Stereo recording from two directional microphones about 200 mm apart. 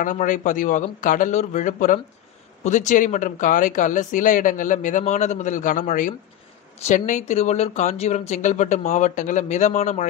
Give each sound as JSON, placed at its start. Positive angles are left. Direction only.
{"t": 0.0, "sound": "speech", "side_deg": 40}